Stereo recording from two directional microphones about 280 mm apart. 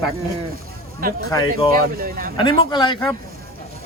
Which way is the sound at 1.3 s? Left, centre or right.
Centre.